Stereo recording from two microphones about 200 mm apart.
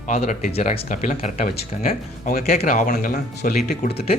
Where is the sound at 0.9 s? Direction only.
40° left (ahead or behind).